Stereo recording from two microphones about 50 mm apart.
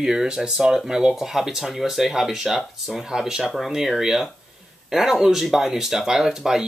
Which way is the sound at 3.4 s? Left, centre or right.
Centre.